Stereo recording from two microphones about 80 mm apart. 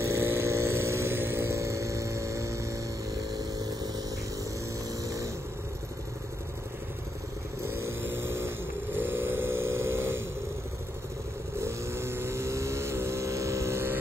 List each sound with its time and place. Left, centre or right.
0.0 s a sound: right
5.0 s vehicle: right
7.6 s vehicle: right
11.5 s vehicle: right